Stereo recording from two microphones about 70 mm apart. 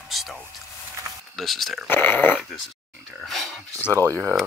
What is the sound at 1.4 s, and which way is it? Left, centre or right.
Speech, centre.